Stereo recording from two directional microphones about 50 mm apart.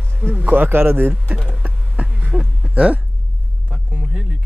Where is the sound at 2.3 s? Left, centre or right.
Centre.